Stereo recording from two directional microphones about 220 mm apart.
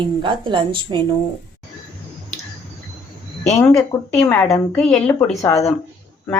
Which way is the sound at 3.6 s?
10° left (ahead or behind).